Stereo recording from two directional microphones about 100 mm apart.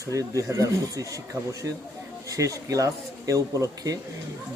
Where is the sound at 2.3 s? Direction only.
35° right (ahead or behind).